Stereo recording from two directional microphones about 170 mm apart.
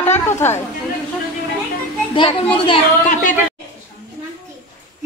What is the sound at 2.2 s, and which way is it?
Speech, 30° left (ahead or behind).